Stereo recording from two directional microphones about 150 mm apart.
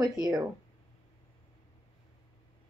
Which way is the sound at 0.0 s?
25° right (ahead or behind).